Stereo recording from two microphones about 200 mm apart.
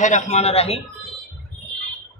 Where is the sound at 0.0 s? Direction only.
35° left (ahead or behind).